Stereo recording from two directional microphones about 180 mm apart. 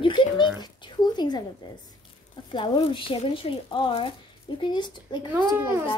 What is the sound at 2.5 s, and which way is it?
Speech, 25° left (ahead or behind).